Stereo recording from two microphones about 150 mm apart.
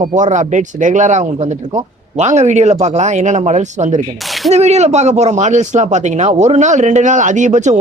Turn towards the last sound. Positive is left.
turn(degrees=-55)  # may be behind; listen again after turning